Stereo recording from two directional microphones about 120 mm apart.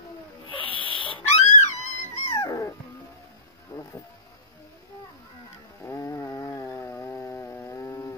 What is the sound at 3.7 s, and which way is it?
Music, 25° left (ahead or behind).